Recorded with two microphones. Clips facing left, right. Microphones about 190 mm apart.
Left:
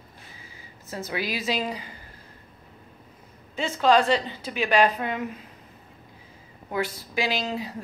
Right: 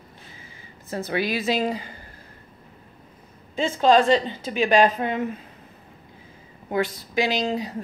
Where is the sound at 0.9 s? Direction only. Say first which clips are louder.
Right 5 dB; 60° right (ahead or behind).